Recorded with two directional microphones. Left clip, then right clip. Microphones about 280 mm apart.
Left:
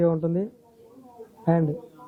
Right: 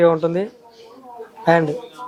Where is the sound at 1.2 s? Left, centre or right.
Centre.